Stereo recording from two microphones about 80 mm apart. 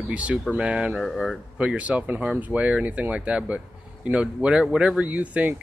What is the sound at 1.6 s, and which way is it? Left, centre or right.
Speech, centre.